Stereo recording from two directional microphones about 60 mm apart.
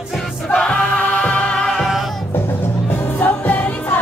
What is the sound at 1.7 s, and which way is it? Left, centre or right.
Music, centre.